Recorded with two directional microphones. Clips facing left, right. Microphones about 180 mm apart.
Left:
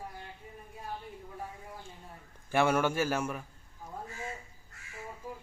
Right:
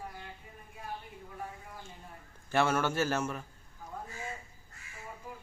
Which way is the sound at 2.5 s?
15° left (ahead or behind).